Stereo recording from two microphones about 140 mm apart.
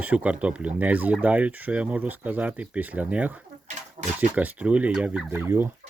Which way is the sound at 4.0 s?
40° right (ahead or behind).